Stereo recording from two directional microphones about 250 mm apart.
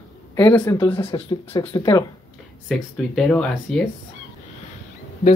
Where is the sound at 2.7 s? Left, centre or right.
Centre.